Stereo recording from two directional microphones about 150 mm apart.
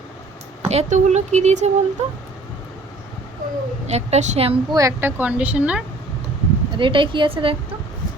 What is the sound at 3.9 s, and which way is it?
Speech, 45° right (ahead or behind).